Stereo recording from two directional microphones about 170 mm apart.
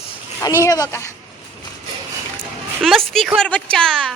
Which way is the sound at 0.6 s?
20° left (ahead or behind).